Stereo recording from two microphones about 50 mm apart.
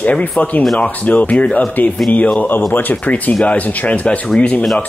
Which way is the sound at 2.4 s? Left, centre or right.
Left.